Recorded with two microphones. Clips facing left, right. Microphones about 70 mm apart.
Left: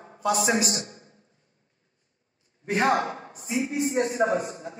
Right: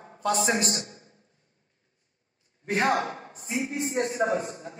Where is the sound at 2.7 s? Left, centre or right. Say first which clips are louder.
Left 2 dB; left.